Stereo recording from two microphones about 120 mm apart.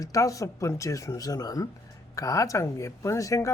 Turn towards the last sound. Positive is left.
turn(degrees=25)  # may be behind; listen again after turning